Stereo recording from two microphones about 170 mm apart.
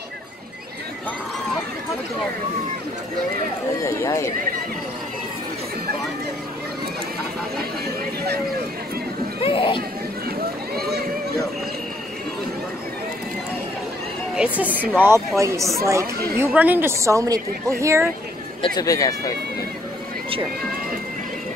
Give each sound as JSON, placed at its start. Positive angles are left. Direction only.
{"t": 3.8, "sound": "speech", "side_deg": 15}
{"t": 9.4, "sound": "speech", "side_deg": 30}
{"t": 10.2, "sound": "a sound", "side_deg": -65}
{"t": 14.7, "sound": "speech", "side_deg": 10}
{"t": 15.0, "sound": "a woman's voice", "side_deg": -15}
{"t": 18.8, "sound": "speech", "side_deg": 20}